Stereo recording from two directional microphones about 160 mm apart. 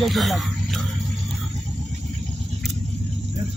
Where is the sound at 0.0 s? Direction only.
Centre (ahead or behind).